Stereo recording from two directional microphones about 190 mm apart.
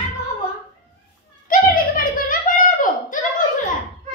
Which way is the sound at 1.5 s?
45° left (ahead or behind).